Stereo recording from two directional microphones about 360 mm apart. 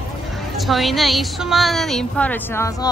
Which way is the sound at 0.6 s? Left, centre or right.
Centre.